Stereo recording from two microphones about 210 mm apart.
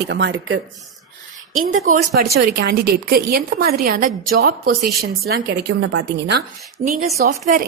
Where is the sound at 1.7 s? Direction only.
40° right (ahead or behind).